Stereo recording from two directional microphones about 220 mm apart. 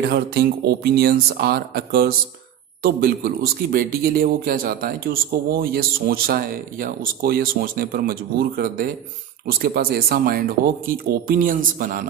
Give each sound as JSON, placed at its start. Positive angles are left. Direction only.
{"t": 0.0, "sound": "speech", "side_deg": -45}